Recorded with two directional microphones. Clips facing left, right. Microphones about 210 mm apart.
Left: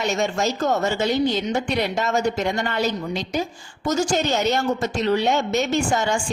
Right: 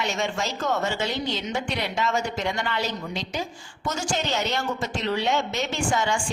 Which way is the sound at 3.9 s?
40° left (ahead or behind).